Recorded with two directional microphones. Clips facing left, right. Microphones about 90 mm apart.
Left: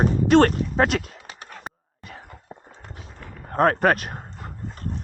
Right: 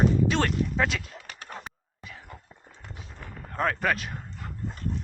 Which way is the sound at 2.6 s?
35° left (ahead or behind).